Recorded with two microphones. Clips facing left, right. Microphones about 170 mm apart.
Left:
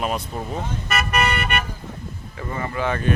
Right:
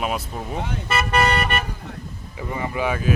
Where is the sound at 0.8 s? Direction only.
30° right (ahead or behind).